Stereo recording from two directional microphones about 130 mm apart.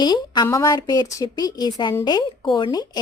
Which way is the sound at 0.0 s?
35° left (ahead or behind).